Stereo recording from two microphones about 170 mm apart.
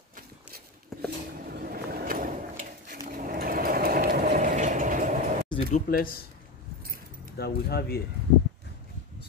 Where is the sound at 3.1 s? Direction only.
55° right (ahead or behind).